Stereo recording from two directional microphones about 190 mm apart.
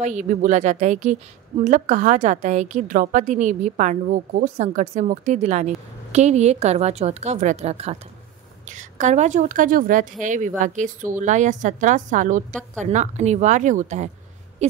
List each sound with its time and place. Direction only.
0.0 s a woman's voice: 40° right (ahead or behind)